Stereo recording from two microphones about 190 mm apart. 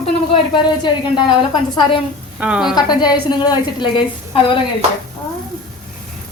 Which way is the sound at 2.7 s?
20° left (ahead or behind).